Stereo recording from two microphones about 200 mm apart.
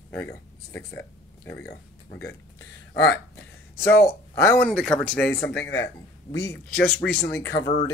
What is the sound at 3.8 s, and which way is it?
Speech, 10° left (ahead or behind).